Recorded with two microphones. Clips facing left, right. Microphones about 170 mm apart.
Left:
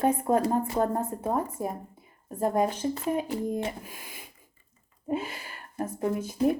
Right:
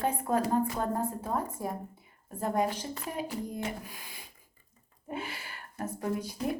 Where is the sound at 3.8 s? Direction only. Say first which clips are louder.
Left 3 dB; 45° left (ahead or behind).